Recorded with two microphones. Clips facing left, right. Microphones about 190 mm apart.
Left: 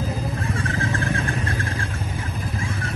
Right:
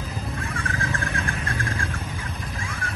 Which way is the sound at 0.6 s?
30° left (ahead or behind).